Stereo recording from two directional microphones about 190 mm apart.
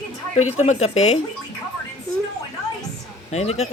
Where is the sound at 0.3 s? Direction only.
35° left (ahead or behind).